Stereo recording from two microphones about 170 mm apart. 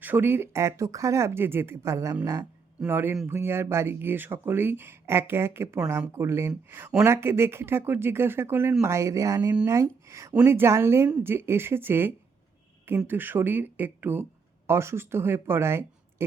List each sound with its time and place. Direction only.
0.0 s speech: 10° right (ahead or behind)